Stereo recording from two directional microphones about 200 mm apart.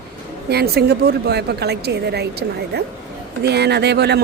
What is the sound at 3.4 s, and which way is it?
Speech, 55° right (ahead or behind).